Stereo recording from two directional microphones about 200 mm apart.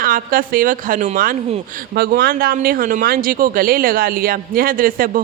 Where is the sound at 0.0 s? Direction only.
45° right (ahead or behind).